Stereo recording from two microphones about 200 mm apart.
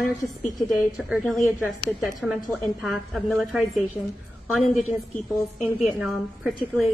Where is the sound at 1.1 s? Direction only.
Centre (ahead or behind).